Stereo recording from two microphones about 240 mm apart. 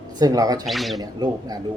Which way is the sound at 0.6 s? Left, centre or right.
Centre.